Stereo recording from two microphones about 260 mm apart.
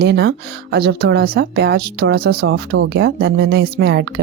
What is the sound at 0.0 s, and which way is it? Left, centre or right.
A woman's voice, right.